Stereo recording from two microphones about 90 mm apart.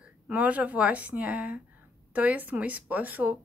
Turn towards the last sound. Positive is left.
turn(degrees=-20)  # may be behind; listen again after turning